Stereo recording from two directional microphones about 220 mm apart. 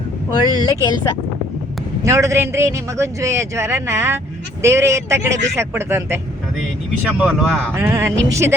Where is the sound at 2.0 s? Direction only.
15° right (ahead or behind).